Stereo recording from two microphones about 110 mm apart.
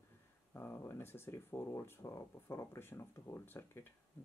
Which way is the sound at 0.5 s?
20° left (ahead or behind).